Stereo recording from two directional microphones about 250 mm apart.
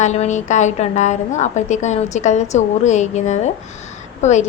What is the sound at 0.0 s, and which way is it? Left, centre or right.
A woman's voice, left.